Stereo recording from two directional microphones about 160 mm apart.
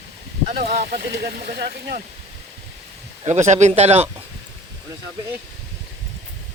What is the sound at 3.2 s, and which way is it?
Speech, 45° right (ahead or behind).